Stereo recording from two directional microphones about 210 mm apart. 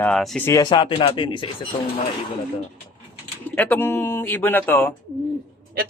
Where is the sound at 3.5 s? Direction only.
10° left (ahead or behind).